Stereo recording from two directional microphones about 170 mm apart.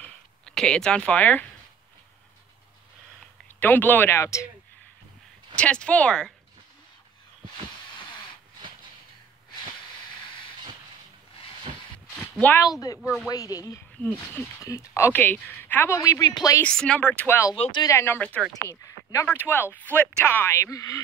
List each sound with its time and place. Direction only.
0.0 s a sound: 5° left (ahead or behind)
3.5 s speech: 10° left (ahead or behind)
5.6 s speech: 5° left (ahead or behind)
12.2 s a sound: 10° left (ahead or behind)
12.8 s speech: 20° left (ahead or behind)
14.0 s speech: 10° left (ahead or behind)
16.6 s speech: 5° left (ahead or behind)
17.6 s speech: 30° left (ahead or behind)
17.9 s speech: 15° left (ahead or behind)